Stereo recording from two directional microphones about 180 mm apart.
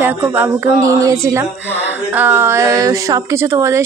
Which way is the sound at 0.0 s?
10° right (ahead or behind).